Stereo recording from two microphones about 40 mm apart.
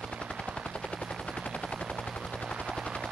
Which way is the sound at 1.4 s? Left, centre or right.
Left.